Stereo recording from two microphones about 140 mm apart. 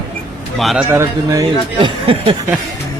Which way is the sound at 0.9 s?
20° right (ahead or behind).